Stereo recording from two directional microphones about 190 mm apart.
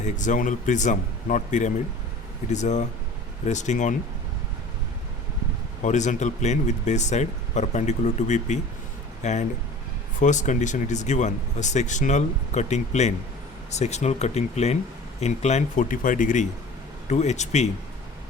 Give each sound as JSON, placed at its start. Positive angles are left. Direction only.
{"t": 0.0, "sound": "speech", "side_deg": 40}
{"t": 5.8, "sound": "speech", "side_deg": 40}